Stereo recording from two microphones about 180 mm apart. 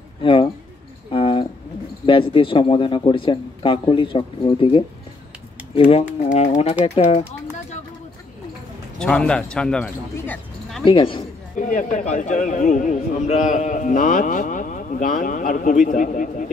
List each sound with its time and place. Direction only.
0.2 s speech: 30° left (ahead or behind)
1.1 s a sound: 30° left (ahead or behind)
2.0 s speech: 30° left (ahead or behind)
9.0 s speech: 5° left (ahead or behind)
10.1 s a sound: 10° left (ahead or behind)
10.9 s speech: 30° left (ahead or behind)
11.5 s a man's voice: 45° left (ahead or behind)